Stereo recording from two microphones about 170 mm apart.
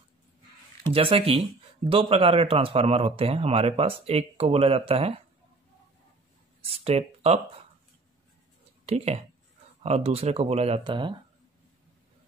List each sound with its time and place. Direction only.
0.8 s speech: 30° right (ahead or behind)
6.6 s speech: 35° right (ahead or behind)
8.8 s speech: 40° right (ahead or behind)